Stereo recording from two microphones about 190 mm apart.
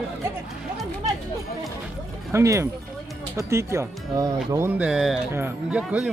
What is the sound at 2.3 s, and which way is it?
Speech, 15° right (ahead or behind).